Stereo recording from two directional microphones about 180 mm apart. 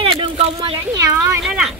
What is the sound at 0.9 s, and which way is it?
Speech, 15° right (ahead or behind).